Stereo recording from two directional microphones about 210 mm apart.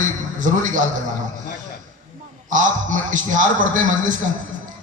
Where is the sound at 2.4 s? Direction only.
35° right (ahead or behind).